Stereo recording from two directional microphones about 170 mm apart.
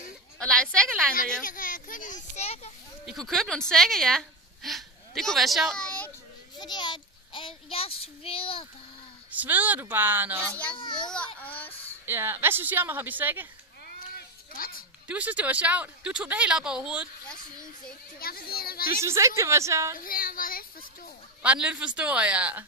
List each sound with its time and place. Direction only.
0.4 s a woman's voice: 5° left (ahead or behind)
1.4 s a child's voice: 55° left (ahead or behind)
3.1 s a woman's voice: centre (ahead or behind)
6.6 s child singing: 25° left (ahead or behind)
9.3 s speech: 10° right (ahead or behind)
10.8 s a child's voice: 30° left (ahead or behind)
11.4 s a sound: 10° left (ahead or behind)
12.1 s speech: 15° right (ahead or behind)
13.9 s a sound: 60° left (ahead or behind)
15.0 s speech: 10° right (ahead or behind)
18.2 s a child's voice: 60° left (ahead or behind)
19.0 s speech: 15° right (ahead or behind)
20.0 s a woman's voice: 55° left (ahead or behind)
21.4 s speech: 5° right (ahead or behind)